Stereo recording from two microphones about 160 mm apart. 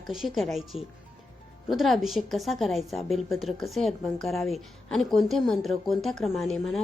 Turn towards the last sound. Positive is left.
turn(degrees=0)  # may be behind; listen again after turning